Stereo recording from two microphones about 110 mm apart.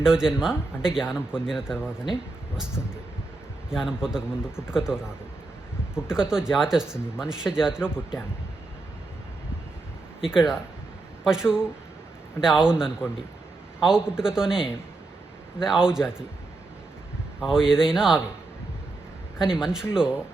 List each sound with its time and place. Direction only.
0.0 s speech: 5° right (ahead or behind)
3.7 s speech: 5° right (ahead or behind)
10.2 s speech: 5° right (ahead or behind)
17.4 s speech: 5° right (ahead or behind)
19.4 s speech: 5° right (ahead or behind)